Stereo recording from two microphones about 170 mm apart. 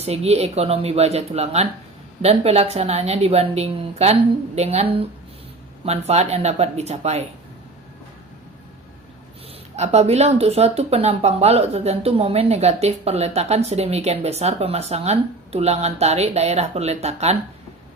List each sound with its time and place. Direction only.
0.0 s speech: 35° right (ahead or behind)
9.7 s speech: 40° right (ahead or behind)